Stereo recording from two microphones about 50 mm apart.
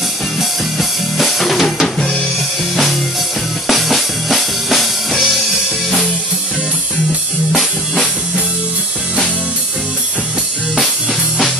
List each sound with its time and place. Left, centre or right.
0.4 s drum kit: centre
2.7 s music: centre
7.5 s music: centre